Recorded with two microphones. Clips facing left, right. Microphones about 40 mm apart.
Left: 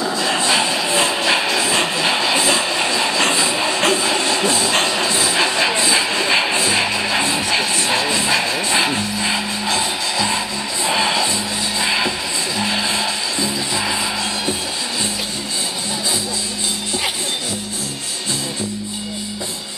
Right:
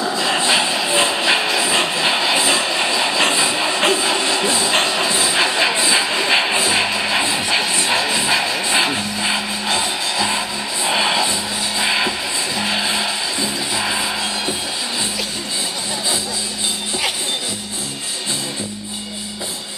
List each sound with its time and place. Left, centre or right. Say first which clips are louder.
0.0 s a sound: even; centre
0.4 s music: even; centre
1.8 s train: even; centre
7.6 s music: even; centre